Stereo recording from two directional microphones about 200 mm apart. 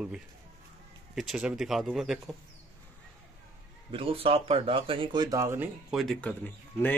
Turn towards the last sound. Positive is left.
turn(degrees=10)  # may be behind; listen again after turning